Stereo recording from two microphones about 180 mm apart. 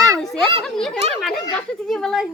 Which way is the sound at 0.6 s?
Centre (ahead or behind).